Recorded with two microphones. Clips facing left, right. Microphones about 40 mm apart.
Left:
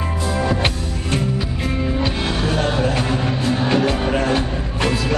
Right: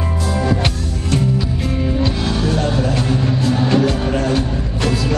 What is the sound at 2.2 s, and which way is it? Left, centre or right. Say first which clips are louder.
Music: right 2 dB; left.